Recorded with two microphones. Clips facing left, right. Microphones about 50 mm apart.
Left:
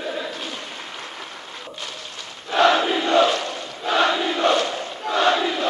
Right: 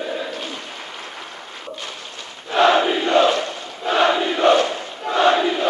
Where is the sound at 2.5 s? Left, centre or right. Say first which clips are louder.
Right 2 dB; centre.